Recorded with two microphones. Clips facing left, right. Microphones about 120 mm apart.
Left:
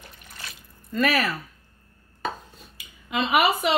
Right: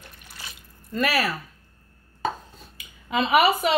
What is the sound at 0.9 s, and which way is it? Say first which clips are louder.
Speech: left 1 dB; 10° right (ahead or behind).